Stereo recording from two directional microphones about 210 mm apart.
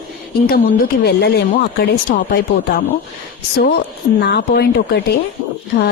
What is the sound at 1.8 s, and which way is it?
Speech, 50° left (ahead or behind).